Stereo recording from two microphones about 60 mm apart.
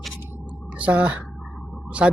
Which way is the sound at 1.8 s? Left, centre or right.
Centre.